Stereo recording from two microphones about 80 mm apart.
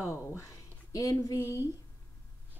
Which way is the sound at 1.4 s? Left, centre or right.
Right.